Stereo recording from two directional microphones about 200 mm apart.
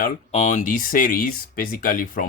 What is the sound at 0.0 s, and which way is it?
Speech, 35° left (ahead or behind).